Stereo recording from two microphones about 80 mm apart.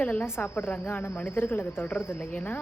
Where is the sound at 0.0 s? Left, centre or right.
Centre.